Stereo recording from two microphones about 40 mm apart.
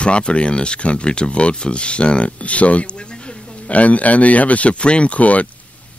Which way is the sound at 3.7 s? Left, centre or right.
Left.